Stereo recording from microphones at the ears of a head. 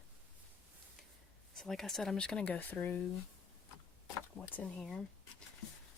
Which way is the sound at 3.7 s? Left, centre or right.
Left.